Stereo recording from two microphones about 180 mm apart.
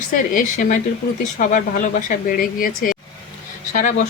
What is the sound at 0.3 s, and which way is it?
Speech, 45° left (ahead or behind).